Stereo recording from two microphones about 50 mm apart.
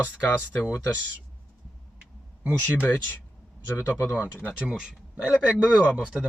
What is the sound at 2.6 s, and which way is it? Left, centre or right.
Speech, left.